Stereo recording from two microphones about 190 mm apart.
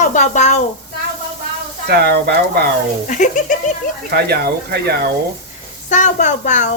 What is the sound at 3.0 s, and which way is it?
Speech, 40° left (ahead or behind).